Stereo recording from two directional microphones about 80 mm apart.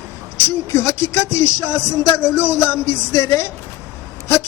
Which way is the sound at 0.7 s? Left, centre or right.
Left.